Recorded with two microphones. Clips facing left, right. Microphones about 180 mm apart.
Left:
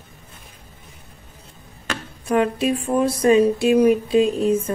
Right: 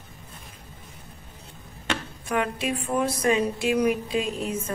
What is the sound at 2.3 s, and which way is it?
A woman's voice, 30° left (ahead or behind).